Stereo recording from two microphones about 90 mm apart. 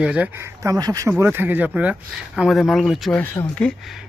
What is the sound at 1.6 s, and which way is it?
Speech, 10° right (ahead or behind).